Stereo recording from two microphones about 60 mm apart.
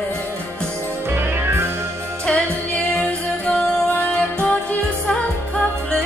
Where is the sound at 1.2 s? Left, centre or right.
Right.